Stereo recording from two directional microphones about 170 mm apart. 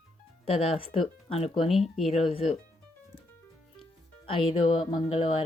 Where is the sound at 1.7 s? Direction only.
Centre (ahead or behind).